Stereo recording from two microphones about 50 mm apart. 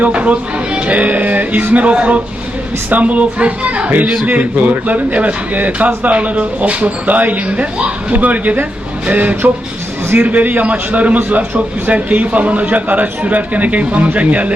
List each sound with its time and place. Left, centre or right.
0.0 s a man's voice: right